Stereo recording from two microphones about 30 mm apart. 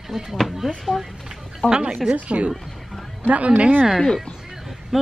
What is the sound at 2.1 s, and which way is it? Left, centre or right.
Speech, right.